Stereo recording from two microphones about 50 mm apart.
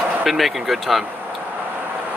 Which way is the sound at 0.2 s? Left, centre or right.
Centre.